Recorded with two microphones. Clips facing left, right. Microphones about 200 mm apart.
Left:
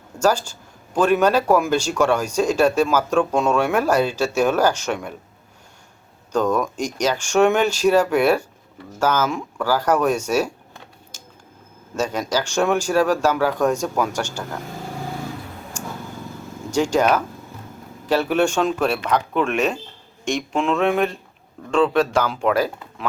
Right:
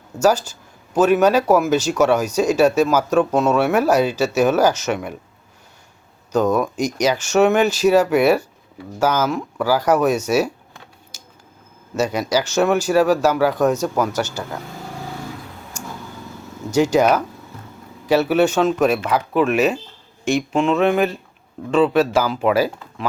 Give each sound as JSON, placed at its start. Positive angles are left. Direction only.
{"t": 0.9, "sound": "speech", "side_deg": -5}
{"t": 6.3, "sound": "speech", "side_deg": -10}
{"t": 11.9, "sound": "speech", "side_deg": -10}
{"t": 16.7, "sound": "speech", "side_deg": -10}